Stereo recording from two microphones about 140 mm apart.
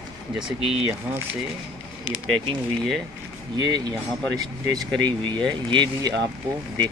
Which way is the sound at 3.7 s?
30° right (ahead or behind).